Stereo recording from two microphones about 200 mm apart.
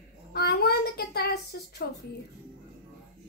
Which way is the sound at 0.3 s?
50° left (ahead or behind).